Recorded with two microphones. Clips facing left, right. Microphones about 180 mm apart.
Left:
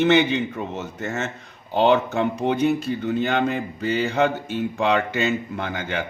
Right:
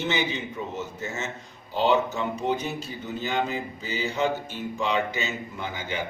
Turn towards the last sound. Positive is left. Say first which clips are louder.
# left 5 dB
turn(degrees=60)  # may be behind; listen again after turning